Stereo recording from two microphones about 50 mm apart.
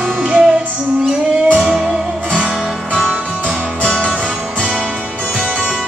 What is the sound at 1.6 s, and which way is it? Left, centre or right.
Music, centre.